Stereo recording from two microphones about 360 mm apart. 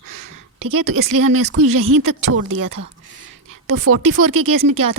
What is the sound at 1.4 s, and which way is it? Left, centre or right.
Speech, right.